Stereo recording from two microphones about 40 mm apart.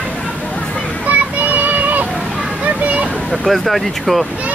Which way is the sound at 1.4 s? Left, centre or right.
Right.